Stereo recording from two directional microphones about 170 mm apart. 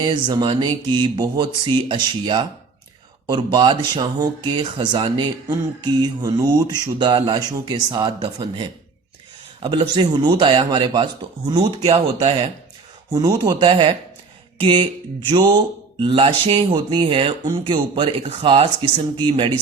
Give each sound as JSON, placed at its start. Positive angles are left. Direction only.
{"t": 0.0, "sound": "speech", "side_deg": -25}
{"t": 13.1, "sound": "speech", "side_deg": -20}
{"t": 14.6, "sound": "a sound", "side_deg": -30}
{"t": 15.3, "sound": "speech", "side_deg": -25}